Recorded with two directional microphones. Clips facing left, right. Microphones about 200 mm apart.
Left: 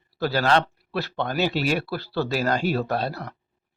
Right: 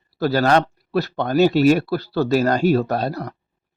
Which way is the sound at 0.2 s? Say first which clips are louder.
Right 5 dB; 40° right (ahead or behind).